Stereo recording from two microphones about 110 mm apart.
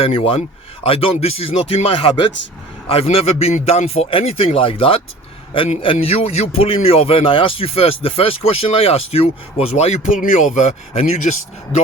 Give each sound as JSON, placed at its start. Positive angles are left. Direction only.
{"t": 0.0, "sound": "speech", "side_deg": 60}
{"t": 2.9, "sound": "speech", "side_deg": 60}